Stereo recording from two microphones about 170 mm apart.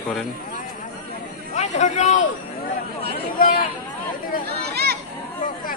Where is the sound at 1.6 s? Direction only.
45° left (ahead or behind).